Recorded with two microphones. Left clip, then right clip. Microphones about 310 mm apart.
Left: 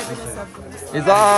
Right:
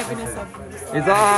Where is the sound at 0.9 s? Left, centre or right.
Centre.